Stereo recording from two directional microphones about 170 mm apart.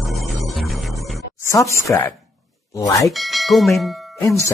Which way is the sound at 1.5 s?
20° left (ahead or behind).